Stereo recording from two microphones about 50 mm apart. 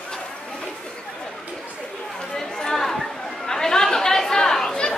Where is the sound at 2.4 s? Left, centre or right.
Centre.